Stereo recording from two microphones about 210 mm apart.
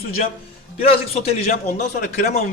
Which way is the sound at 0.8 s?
30° left (ahead or behind).